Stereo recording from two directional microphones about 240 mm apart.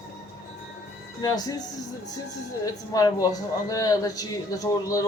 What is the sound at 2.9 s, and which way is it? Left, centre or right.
Speech, centre.